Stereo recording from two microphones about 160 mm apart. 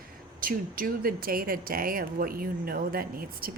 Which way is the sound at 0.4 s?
65° right (ahead or behind).